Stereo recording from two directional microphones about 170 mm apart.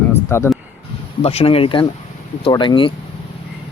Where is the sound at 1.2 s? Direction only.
35° left (ahead or behind).